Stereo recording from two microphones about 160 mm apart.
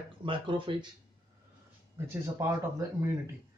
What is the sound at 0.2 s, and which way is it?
Speech, 30° right (ahead or behind).